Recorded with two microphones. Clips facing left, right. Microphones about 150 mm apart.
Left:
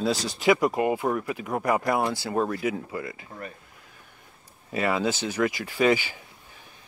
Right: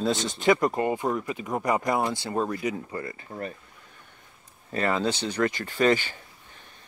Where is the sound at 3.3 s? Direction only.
40° right (ahead or behind).